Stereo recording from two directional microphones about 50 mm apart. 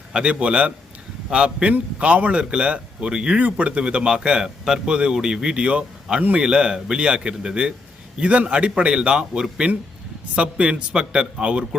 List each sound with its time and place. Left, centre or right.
0.1 s speech: right